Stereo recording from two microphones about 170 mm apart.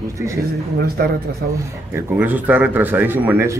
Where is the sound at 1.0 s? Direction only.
70° right (ahead or behind).